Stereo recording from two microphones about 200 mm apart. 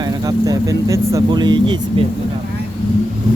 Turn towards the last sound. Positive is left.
turn(degrees=-25)  # may be behind; listen again after turning